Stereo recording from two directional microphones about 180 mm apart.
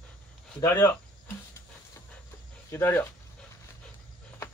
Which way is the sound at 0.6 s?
15° left (ahead or behind).